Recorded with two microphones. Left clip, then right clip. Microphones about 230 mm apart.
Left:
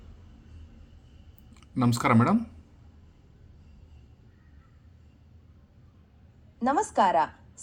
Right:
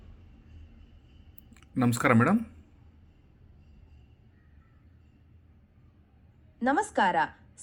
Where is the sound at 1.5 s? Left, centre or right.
Centre.